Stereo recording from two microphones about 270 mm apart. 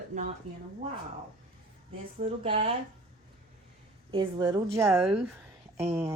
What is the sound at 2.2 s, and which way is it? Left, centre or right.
Speech, right.